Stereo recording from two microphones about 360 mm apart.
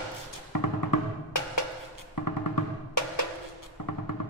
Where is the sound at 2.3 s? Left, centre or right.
Left.